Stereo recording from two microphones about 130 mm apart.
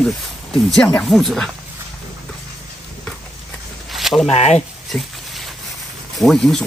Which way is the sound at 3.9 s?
Centre (ahead or behind).